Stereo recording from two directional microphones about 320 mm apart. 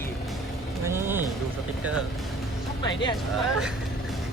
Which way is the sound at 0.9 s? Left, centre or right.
Centre.